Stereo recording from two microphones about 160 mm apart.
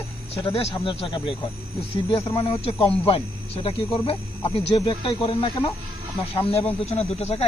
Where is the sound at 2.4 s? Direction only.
35° left (ahead or behind).